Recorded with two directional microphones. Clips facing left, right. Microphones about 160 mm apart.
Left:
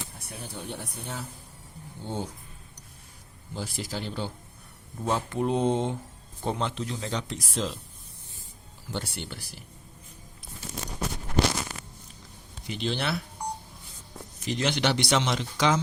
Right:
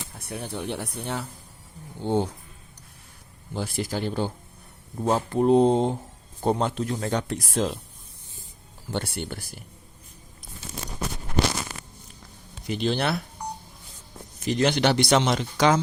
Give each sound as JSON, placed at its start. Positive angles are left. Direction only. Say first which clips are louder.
{"t": 0.2, "sound": "speech", "louder": "right 11 dB", "side_deg": -60}
{"t": 3.5, "sound": "speech", "louder": "right 5 dB", "side_deg": -55}
{"t": 5.0, "sound": "speech", "louder": "right 6 dB", "side_deg": -35}
{"t": 8.9, "sound": "speech", "louder": "right 5 dB", "side_deg": -55}
{"t": 12.6, "sound": "speech", "louder": "right 5 dB", "side_deg": -45}
{"t": 14.4, "sound": "speech", "louder": "right 5 dB", "side_deg": -45}